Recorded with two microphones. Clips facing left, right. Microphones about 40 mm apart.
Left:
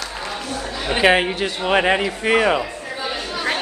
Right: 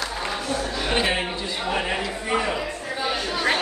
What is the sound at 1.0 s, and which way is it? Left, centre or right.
Speech, left.